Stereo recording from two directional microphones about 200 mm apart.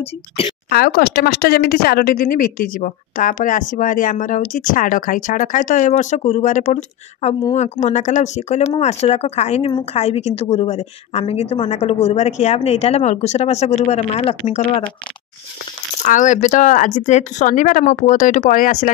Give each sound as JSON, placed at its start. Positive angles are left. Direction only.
{"t": 0.7, "sound": "speech", "side_deg": 50}
{"t": 16.0, "sound": "speech", "side_deg": 40}